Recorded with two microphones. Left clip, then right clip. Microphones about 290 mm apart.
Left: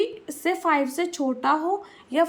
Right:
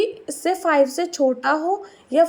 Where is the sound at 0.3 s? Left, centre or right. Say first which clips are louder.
Right 1 dB; centre.